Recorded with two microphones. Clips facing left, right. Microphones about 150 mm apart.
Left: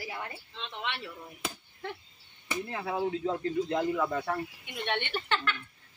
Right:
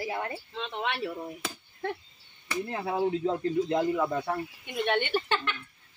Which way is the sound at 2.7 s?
30° right (ahead or behind).